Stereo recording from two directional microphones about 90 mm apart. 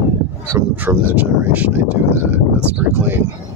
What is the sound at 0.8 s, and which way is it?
Speech, 20° right (ahead or behind).